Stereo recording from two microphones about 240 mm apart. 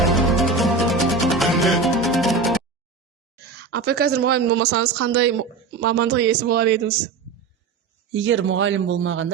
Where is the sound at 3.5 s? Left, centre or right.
Right.